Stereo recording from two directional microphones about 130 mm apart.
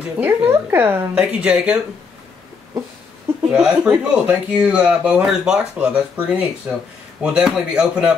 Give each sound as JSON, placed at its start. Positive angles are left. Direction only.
{"t": 0.2, "sound": "speech", "side_deg": -15}
{"t": 3.5, "sound": "speech", "side_deg": -5}